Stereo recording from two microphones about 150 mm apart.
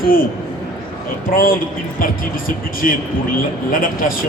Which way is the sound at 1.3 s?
70° left (ahead or behind).